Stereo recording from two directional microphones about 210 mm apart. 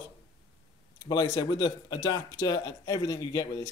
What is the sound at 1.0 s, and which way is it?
Speech, 20° left (ahead or behind).